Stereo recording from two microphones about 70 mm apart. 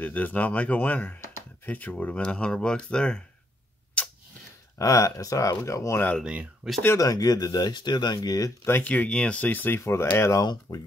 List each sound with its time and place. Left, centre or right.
0.0 s speech: left
4.0 s tick-tock: centre
4.7 s speech: left
6.2 s speech: centre
7.0 s speech: left
8.8 s speech: left
9.8 s speech: left
10.4 s speech: left